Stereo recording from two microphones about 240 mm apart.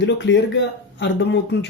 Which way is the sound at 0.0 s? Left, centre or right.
Left.